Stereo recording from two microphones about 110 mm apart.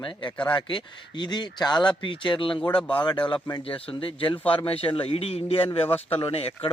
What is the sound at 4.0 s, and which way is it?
Speech, 50° left (ahead or behind).